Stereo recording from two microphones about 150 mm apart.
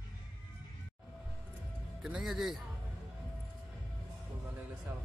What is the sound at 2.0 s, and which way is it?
Speech, 5° right (ahead or behind).